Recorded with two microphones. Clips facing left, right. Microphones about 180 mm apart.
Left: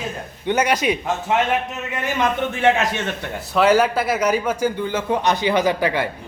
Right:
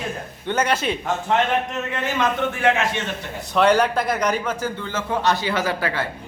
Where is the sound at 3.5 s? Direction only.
5° left (ahead or behind).